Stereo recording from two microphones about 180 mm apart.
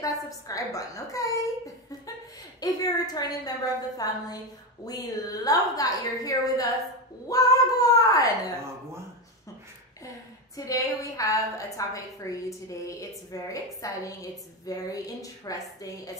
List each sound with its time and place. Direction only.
0.0 s a woman's voice: 20° left (ahead or behind)
2.6 s a woman's voice: 20° left (ahead or behind)
10.5 s a woman's voice: 20° left (ahead or behind)